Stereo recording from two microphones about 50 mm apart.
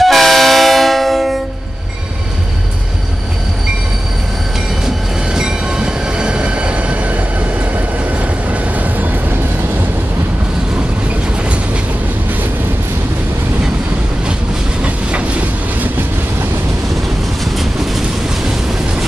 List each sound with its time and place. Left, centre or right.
0.0 s train: centre
4.8 s train: centre
8.5 s vehicle: right
14.8 s train: right